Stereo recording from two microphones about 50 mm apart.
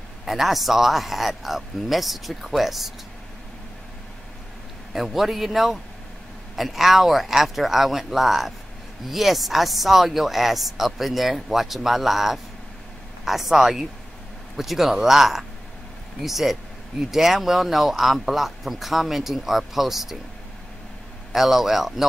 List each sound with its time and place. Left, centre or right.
0.2 s speech: centre
4.9 s speech: centre
21.3 s speech: centre